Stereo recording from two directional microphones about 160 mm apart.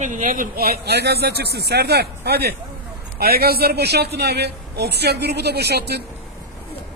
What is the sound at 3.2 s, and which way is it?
A man's voice, 75° right (ahead or behind).